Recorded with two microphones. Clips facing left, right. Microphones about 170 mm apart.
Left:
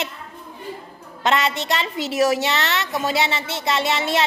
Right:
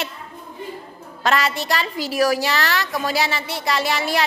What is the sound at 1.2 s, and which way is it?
Speech, 20° left (ahead or behind).